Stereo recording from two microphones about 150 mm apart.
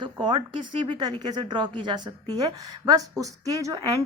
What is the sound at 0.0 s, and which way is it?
A woman's voice, 30° right (ahead or behind).